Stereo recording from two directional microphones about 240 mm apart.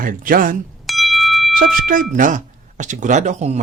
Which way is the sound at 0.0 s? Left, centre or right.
Right.